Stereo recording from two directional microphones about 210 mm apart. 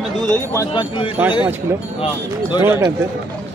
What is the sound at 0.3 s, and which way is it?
Speech, 15° left (ahead or behind).